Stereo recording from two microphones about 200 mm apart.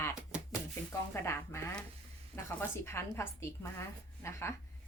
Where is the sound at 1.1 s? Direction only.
10° left (ahead or behind).